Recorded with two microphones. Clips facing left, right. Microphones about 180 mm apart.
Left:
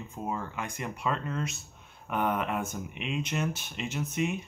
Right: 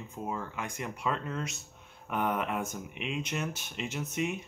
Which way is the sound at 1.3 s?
15° right (ahead or behind).